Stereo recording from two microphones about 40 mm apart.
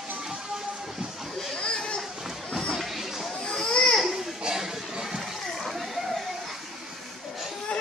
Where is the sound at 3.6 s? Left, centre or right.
Centre.